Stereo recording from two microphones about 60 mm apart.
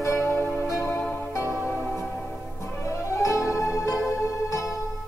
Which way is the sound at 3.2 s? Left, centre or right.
Left.